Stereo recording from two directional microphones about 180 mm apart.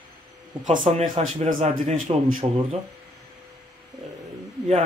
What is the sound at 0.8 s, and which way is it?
Speech, 40° right (ahead or behind).